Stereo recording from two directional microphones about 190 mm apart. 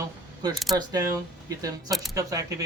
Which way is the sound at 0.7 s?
20° right (ahead or behind).